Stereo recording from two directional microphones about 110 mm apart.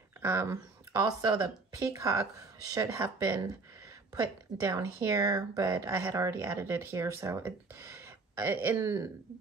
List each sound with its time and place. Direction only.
0.2 s speech: 20° right (ahead or behind)
0.9 s speech: 40° right (ahead or behind)
1.8 s speech: 25° right (ahead or behind)
3.0 s speech: 20° right (ahead or behind)
4.6 s speech: 20° right (ahead or behind)